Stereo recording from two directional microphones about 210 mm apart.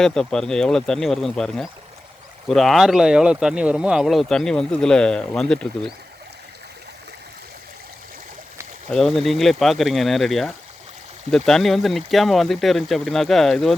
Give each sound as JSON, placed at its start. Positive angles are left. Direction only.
{"t": 0.0, "sound": "speech", "side_deg": 5}
{"t": 8.9, "sound": "speech", "side_deg": 0}